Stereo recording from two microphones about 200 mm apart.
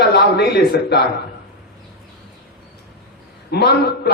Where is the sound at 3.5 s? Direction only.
55° left (ahead or behind).